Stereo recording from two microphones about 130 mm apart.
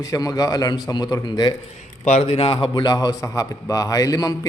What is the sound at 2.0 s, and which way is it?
Speech, 55° left (ahead or behind).